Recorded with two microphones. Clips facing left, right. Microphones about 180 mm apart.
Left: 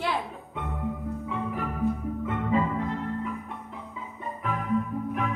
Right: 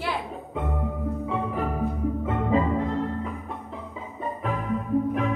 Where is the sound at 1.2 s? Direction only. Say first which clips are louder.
Right 3 dB; 30° right (ahead or behind).